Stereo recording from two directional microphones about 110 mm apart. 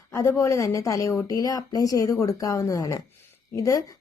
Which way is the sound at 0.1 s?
25° left (ahead or behind).